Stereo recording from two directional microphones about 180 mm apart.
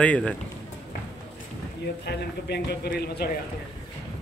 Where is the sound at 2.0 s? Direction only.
65° left (ahead or behind).